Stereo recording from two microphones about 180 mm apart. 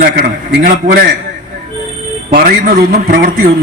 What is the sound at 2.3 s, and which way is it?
A man's voice, 50° right (ahead or behind).